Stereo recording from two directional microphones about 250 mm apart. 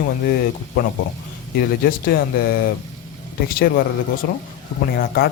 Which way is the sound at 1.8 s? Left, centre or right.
Left.